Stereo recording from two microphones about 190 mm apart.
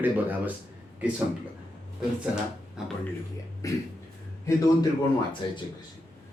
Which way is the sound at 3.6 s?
15° left (ahead or behind).